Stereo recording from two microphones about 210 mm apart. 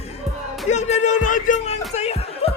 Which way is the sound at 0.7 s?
35° left (ahead or behind).